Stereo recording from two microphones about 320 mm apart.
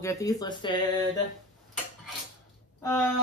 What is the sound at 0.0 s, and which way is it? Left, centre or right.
Speech, centre.